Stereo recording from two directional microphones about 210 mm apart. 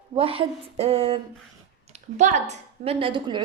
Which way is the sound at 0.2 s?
25° right (ahead or behind).